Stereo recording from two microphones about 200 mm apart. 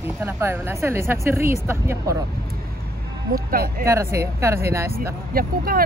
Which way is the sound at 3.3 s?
50° right (ahead or behind).